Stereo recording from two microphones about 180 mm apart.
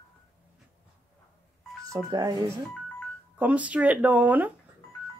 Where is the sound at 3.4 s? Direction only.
5° right (ahead or behind).